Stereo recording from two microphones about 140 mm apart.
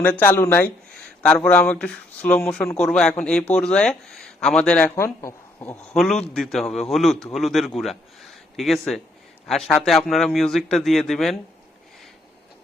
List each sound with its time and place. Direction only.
0.0 s speech: 10° left (ahead or behind)
4.9 s speech: 20° left (ahead or behind)
5.9 s speech: 5° left (ahead or behind)